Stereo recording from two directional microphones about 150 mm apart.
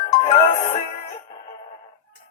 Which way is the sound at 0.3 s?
40° left (ahead or behind).